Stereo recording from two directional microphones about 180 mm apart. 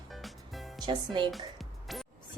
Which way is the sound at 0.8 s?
25° right (ahead or behind).